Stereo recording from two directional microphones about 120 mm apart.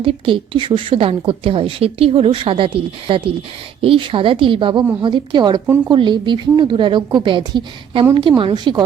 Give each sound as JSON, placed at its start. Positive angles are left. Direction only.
{"t": 0.0, "sound": "a woman's voice", "side_deg": -45}
{"t": 5.6, "sound": "speech", "side_deg": -15}
{"t": 5.9, "sound": "a woman's voice", "side_deg": -40}